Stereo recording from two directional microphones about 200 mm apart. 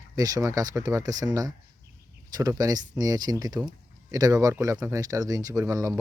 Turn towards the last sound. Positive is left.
turn(degrees=-15)  # may be behind; listen again after turning